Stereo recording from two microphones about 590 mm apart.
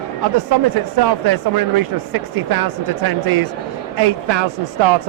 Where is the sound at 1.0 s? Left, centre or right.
Right.